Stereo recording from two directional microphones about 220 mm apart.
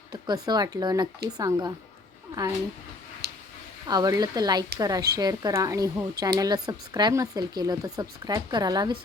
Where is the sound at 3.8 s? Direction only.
15° right (ahead or behind).